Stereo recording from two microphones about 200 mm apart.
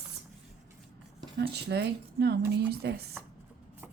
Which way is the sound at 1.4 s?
55° right (ahead or behind).